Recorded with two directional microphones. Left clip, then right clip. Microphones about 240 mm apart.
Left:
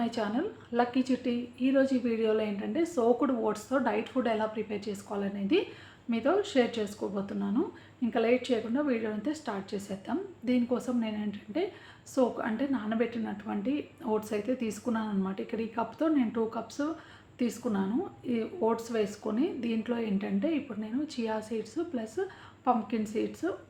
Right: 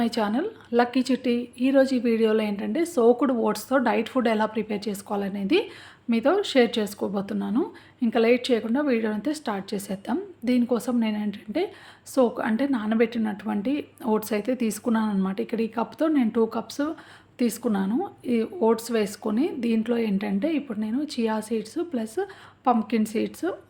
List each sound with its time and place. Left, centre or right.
0.0 s a woman's voice: right